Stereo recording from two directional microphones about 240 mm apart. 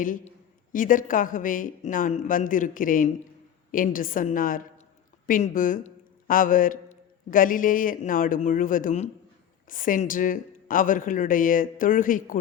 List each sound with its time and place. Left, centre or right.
0.0 s a man's voice: left